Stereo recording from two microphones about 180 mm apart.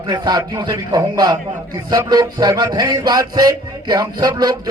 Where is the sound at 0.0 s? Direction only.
20° right (ahead or behind).